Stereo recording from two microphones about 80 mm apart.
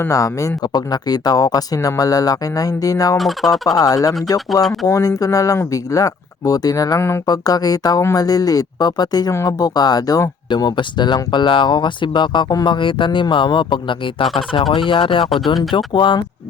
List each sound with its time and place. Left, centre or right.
0.1 s speech: left
0.7 s speech: left
3.2 s speech: centre
3.7 s speech: left
10.5 s speech: left
12.6 s speech: left